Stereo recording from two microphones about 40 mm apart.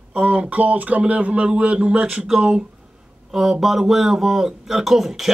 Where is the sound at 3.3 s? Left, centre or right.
Centre.